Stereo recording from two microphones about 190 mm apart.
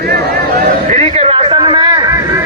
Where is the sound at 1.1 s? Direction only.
30° right (ahead or behind).